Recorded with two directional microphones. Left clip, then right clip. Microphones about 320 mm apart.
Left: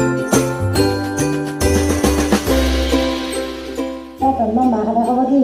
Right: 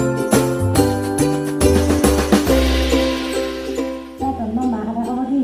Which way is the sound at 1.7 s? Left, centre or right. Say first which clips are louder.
Even; centre.